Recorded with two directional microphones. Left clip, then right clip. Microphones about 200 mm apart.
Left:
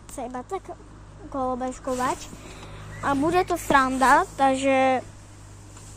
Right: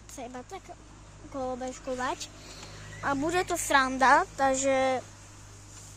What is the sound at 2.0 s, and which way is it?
Speech, centre (ahead or behind).